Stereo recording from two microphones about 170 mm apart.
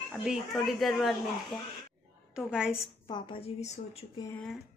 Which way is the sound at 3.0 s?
30° left (ahead or behind).